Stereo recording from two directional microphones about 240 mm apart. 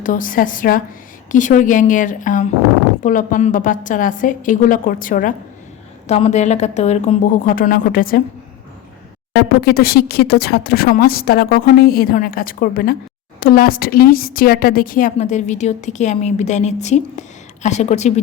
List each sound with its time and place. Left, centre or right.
0.0 s a woman's voice: left
9.3 s a woman's voice: left